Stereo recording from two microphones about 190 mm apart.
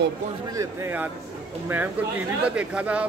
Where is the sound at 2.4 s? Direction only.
5° right (ahead or behind).